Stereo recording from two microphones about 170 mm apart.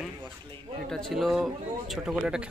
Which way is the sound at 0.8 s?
Centre (ahead or behind).